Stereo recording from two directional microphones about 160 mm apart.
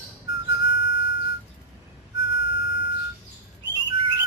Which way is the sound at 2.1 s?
90° left.